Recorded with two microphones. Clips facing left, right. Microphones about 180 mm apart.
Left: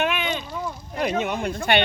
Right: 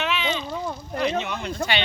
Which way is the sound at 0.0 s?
50° left (ahead or behind).